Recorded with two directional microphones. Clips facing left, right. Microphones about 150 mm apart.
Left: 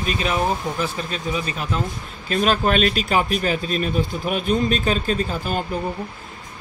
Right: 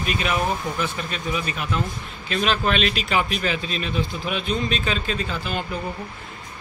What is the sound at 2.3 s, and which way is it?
Speech, 45° left (ahead or behind).